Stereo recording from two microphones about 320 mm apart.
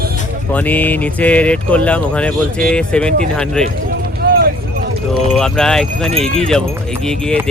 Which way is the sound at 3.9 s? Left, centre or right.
Right.